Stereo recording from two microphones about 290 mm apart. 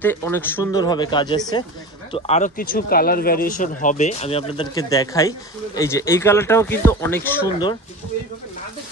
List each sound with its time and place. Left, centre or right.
0.0 s speech: centre